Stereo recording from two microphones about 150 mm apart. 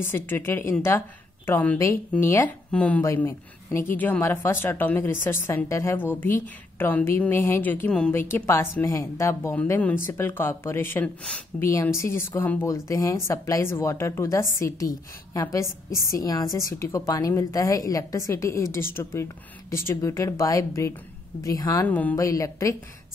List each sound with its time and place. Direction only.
0.0 s a woman's voice: 15° left (ahead or behind)
15.9 s a woman's voice: 20° left (ahead or behind)
21.8 s a woman's voice: 10° left (ahead or behind)
22.1 s a woman's voice: 20° left (ahead or behind)